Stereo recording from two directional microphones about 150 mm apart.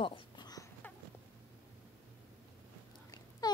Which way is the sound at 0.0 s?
30° left (ahead or behind).